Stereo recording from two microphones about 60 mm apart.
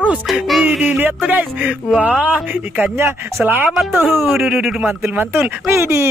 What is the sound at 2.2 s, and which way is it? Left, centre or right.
Speech, right.